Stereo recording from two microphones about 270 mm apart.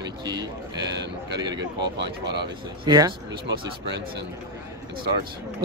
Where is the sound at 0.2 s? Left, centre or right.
Centre.